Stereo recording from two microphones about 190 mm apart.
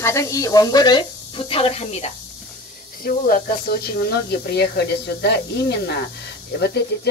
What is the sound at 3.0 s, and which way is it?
Speech, 50° left (ahead or behind).